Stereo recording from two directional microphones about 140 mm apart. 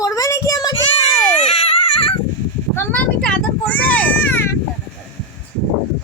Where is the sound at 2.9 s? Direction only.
10° left (ahead or behind).